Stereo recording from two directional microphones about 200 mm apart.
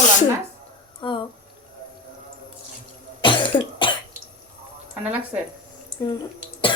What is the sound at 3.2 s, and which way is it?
Cough, 25° left (ahead or behind).